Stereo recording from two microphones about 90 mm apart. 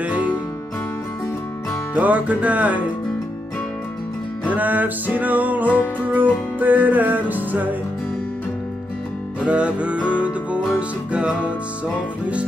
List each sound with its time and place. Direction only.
0.0 s music: 15° right (ahead or behind)
2.0 s music: 15° right (ahead or behind)
4.5 s music: 20° right (ahead or behind)
9.4 s music: 15° right (ahead or behind)